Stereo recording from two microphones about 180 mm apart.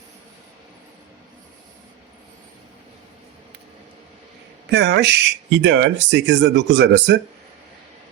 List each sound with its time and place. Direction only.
4.6 s speech: 75° right (ahead or behind)